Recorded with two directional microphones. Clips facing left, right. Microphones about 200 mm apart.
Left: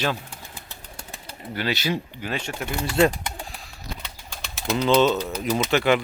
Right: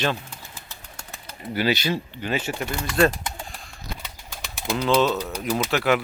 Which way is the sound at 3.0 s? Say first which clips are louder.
Even; 15° left (ahead or behind).